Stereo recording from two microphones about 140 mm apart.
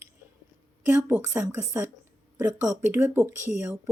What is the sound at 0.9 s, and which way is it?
Speech, 10° right (ahead or behind).